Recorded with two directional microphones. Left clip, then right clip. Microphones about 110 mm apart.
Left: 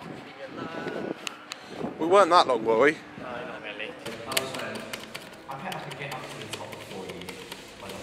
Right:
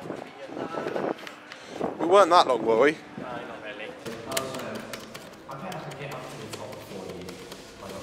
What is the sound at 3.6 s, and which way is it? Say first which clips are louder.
Typewriter: left 1 dB; 5° right (ahead or behind).